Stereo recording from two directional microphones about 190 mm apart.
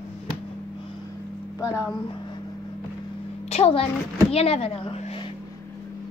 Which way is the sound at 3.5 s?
30° left (ahead or behind).